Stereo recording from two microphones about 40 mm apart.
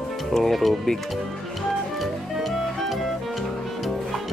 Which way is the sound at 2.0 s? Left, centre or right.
Centre.